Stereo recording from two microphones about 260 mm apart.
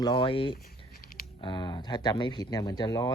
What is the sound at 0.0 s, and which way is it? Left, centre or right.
Speech, centre.